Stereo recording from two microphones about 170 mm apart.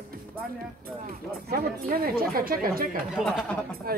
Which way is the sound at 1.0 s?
60° right (ahead or behind).